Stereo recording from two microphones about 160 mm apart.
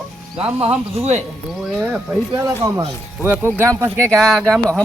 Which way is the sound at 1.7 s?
5° right (ahead or behind).